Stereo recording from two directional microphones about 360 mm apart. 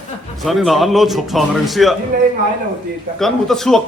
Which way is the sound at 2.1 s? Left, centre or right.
Right.